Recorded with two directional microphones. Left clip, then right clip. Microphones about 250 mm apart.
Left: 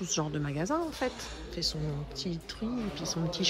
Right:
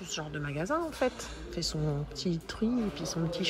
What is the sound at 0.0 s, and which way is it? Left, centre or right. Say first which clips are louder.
Speech: left 4 dB; left.